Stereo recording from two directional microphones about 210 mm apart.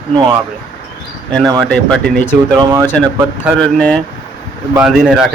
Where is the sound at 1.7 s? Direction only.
5° left (ahead or behind).